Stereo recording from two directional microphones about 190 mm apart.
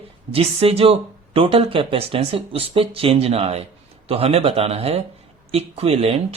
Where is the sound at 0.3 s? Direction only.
30° right (ahead or behind).